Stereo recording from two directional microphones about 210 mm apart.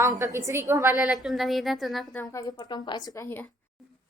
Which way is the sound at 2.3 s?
20° left (ahead or behind).